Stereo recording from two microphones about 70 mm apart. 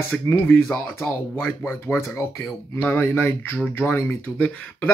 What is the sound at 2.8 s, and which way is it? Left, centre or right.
Speech, left.